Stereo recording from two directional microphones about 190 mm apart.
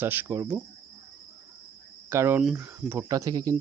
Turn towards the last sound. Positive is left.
turn(degrees=-20)  # may be behind; listen again after turning